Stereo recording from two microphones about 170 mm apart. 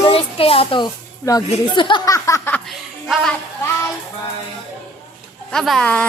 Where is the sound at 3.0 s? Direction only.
Centre (ahead or behind).